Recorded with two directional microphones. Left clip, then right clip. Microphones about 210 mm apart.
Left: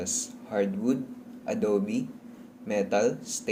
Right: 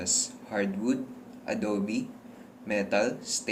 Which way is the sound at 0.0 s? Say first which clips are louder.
Right 2 dB; 45° left (ahead or behind).